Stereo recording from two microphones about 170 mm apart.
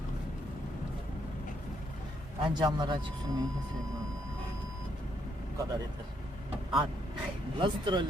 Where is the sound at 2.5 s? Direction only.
25° right (ahead or behind).